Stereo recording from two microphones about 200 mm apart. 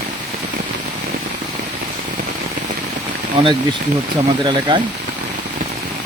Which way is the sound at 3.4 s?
25° right (ahead or behind).